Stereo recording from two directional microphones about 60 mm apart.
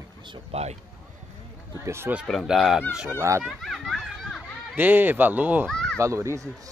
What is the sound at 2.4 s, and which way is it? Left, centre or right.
Speech, centre.